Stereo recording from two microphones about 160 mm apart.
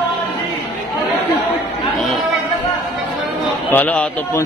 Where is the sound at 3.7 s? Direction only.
10° left (ahead or behind).